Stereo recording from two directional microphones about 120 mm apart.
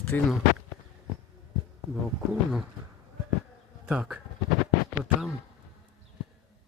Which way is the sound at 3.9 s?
10° right (ahead or behind).